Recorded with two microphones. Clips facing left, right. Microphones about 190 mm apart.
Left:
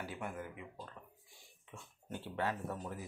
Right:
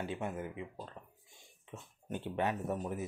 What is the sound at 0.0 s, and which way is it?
Speech, 25° right (ahead or behind).